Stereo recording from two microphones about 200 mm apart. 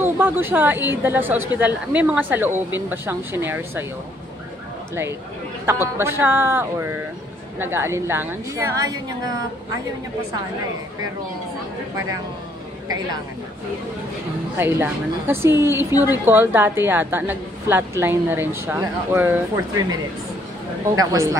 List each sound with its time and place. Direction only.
0.0 s a woman's voice: 10° right (ahead or behind)
5.7 s a woman's voice: 10° right (ahead or behind)
12.8 s a woman's voice: 20° right (ahead or behind)
14.6 s a woman's voice: 10° right (ahead or behind)